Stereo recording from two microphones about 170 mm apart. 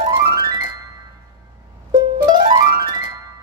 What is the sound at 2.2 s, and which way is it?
Music, 25° right (ahead or behind).